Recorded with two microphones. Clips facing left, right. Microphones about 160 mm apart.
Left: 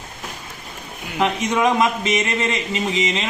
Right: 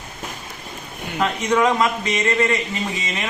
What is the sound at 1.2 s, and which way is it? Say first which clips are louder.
A man's voice: even; 20° left (ahead or behind).